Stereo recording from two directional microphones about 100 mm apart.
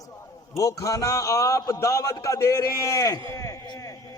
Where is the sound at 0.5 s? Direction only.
35° left (ahead or behind).